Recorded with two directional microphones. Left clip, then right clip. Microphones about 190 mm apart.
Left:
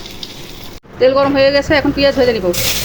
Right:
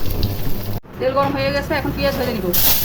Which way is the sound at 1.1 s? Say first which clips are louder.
Left 5 dB; 25° left (ahead or behind).